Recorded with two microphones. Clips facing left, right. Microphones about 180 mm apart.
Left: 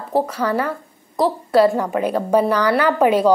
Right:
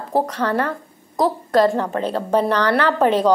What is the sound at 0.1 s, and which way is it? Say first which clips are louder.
A woman's voice: left 1 dB; 10° left (ahead or behind).